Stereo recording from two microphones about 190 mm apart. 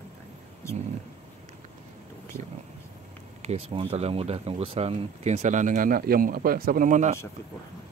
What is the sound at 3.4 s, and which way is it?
Speech, 30° right (ahead or behind).